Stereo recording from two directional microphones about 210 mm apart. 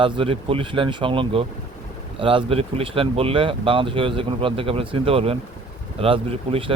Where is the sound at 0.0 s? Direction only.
25° right (ahead or behind).